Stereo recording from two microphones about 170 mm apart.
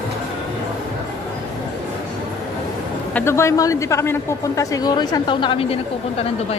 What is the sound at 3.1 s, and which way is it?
A woman's voice, 15° left (ahead or behind).